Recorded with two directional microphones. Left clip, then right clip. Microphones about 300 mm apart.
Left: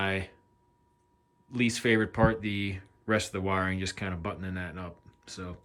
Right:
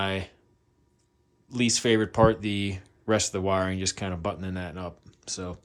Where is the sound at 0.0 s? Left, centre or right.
Centre.